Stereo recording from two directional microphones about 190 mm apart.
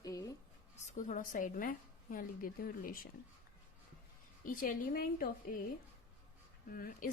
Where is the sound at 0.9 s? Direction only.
40° left (ahead or behind).